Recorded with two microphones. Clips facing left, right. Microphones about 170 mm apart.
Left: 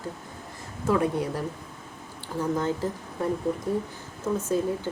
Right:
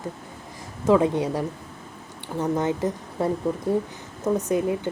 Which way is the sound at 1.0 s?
90° right.